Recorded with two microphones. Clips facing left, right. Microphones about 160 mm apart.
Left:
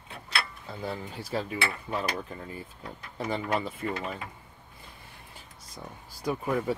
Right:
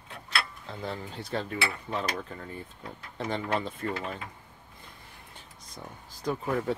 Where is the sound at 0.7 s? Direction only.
5° left (ahead or behind).